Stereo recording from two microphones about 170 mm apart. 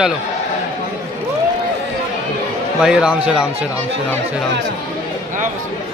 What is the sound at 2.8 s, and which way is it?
Speech, 5° right (ahead or behind).